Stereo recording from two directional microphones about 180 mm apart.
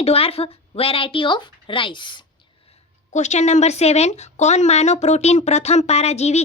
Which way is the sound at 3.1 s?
40° left (ahead or behind).